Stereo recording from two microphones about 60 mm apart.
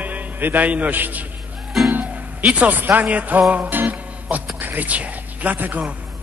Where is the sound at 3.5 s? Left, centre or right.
Right.